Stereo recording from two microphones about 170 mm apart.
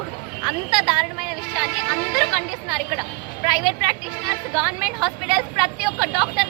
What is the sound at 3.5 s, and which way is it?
A woman's voice, 5° right (ahead or behind).